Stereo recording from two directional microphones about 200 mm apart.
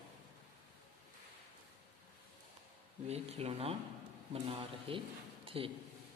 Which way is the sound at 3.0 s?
30° right (ahead or behind).